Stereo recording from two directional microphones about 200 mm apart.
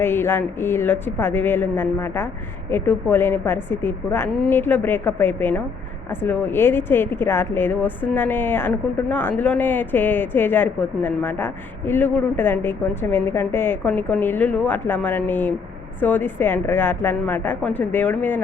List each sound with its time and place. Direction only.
0.0 s speech: 10° left (ahead or behind)